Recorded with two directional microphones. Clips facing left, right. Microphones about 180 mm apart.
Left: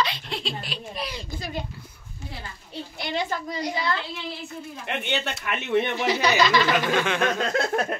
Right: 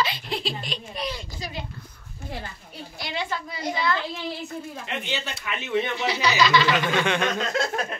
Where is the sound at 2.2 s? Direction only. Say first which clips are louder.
Right 3 dB; 55° right (ahead or behind).